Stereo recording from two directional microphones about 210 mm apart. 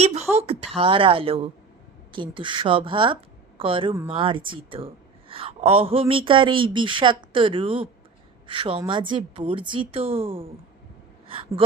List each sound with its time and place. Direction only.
0.0 s a woman's voice: 30° right (ahead or behind)